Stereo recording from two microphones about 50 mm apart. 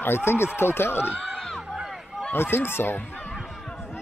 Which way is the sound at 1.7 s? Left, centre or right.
Centre.